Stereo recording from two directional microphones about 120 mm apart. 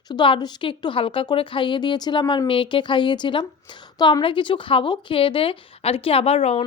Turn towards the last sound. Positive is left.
turn(degrees=55)  # may be behind; listen again after turning